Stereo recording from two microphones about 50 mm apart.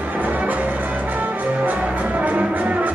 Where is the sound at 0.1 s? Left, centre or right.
Right.